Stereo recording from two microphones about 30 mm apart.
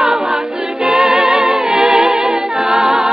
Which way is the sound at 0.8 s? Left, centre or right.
Right.